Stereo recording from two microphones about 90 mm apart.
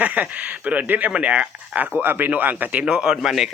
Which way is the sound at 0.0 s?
15° right (ahead or behind).